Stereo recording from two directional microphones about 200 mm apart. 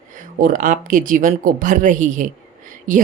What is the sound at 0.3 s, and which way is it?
Speech, 45° right (ahead or behind).